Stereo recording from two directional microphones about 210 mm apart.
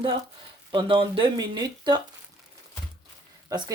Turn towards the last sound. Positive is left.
turn(degrees=-15)  # may be behind; listen again after turning